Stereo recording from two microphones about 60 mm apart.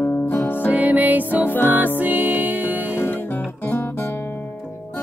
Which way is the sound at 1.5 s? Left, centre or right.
Left.